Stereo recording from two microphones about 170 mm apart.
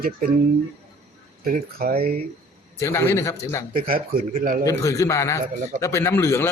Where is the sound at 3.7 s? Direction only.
55° right (ahead or behind).